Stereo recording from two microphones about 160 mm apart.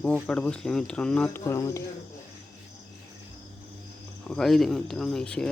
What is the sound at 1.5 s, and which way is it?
Speech, 20° left (ahead or behind).